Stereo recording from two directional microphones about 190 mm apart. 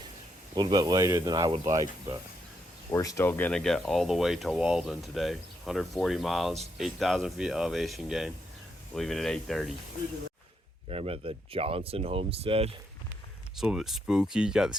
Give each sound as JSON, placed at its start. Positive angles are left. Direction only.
{"t": 0.5, "sound": "speech", "side_deg": -20}
{"t": 2.9, "sound": "speech", "side_deg": 15}
{"t": 10.8, "sound": "speech", "side_deg": -30}
{"t": 13.6, "sound": "speech", "side_deg": 0}